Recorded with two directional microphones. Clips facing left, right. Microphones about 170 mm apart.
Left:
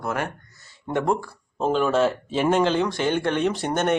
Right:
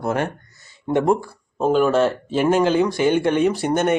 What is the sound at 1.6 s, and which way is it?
Speech, 5° right (ahead or behind).